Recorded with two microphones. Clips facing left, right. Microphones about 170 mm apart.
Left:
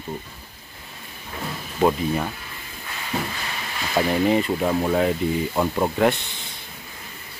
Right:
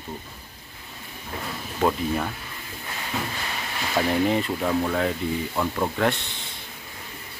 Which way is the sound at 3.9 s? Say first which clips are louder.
Left 3 dB; 5° left (ahead or behind).